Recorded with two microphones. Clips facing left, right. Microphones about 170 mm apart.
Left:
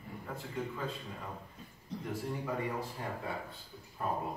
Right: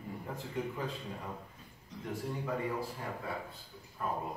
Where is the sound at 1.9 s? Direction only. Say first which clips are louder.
Left 5 dB; 35° left (ahead or behind).